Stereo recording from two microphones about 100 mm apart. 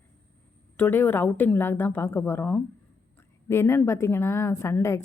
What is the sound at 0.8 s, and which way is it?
A woman's voice, 20° left (ahead or behind).